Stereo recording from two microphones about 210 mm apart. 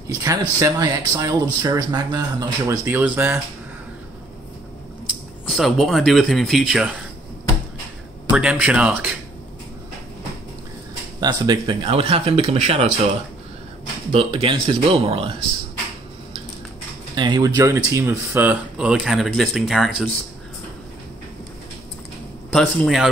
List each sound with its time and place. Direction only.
0.1 s speech: 15° right (ahead or behind)
5.5 s speech: centre (ahead or behind)
8.3 s speech: 5° right (ahead or behind)
11.1 s speech: 20° right (ahead or behind)
14.1 s speech: 25° right (ahead or behind)
17.1 s speech: 20° right (ahead or behind); by 20.1 s centre (ahead or behind)
22.5 s speech: 5° left (ahead or behind)